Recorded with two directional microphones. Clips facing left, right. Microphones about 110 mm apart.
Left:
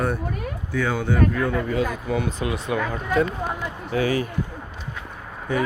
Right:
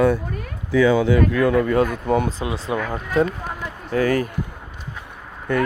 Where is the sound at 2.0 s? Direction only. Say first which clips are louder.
Right 6 dB; 50° right (ahead or behind).